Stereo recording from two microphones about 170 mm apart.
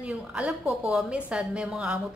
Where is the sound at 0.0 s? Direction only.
5° right (ahead or behind).